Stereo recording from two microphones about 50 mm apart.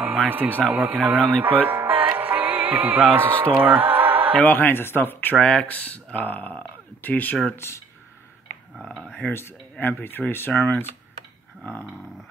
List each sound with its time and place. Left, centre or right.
0.3 s speech: right
2.1 s music: right
4.4 s speech: left
5.4 s speech: centre
5.7 s speech: left
7.6 s speech: left
9.0 s speech: left
9.3 s speech: left